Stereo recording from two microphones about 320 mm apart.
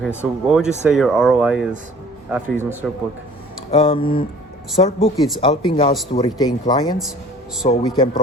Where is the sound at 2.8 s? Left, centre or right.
Centre.